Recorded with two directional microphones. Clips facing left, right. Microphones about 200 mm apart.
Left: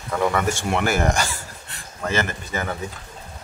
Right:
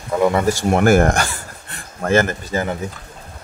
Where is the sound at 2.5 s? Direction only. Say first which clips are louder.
Right 6 dB; 30° right (ahead or behind).